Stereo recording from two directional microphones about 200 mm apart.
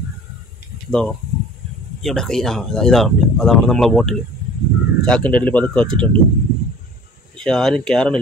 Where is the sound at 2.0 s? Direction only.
Centre (ahead or behind).